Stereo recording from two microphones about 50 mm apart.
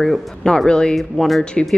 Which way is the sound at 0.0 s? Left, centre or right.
Centre.